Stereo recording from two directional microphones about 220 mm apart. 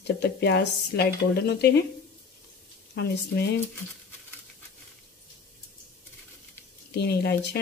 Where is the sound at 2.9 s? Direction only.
50° left (ahead or behind).